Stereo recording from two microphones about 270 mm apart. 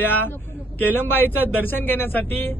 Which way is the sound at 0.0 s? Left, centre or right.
Centre.